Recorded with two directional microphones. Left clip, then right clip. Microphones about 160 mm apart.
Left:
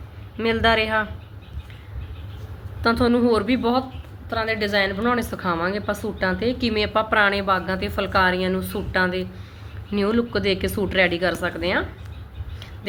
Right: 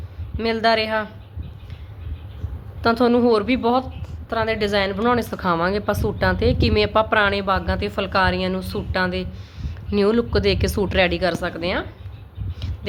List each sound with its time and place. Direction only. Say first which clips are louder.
0.3 s a man's voice: even; 25° right (ahead or behind)
2.8 s a woman's voice: right 2 dB; 35° right (ahead or behind)
4.3 s a woman's voice: right 2 dB; 50° right (ahead or behind); by 11.9 s 30° right (ahead or behind)